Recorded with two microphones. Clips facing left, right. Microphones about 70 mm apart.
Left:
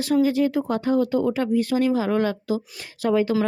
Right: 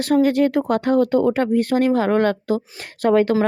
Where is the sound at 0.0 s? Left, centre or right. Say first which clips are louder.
Right 3 dB; right.